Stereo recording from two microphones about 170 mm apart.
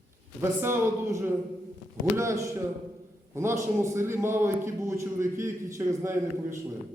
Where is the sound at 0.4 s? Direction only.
15° right (ahead or behind).